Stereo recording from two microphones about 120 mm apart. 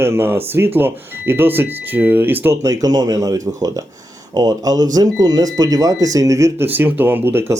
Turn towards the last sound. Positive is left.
turn(degrees=-20)  # may be behind; listen again after turning